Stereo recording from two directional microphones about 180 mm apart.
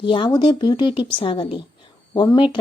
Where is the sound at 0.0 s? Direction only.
25° left (ahead or behind).